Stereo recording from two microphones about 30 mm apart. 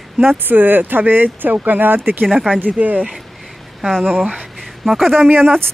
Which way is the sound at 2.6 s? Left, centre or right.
Right.